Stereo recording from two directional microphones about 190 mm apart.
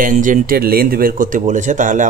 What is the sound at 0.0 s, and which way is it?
Speech, 45° right (ahead or behind).